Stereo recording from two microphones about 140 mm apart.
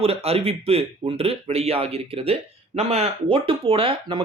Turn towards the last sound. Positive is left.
turn(degrees=-40)  # may be behind; listen again after turning